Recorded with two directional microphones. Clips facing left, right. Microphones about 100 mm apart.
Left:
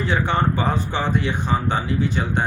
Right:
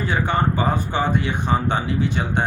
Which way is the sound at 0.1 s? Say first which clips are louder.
Even; 10° right (ahead or behind).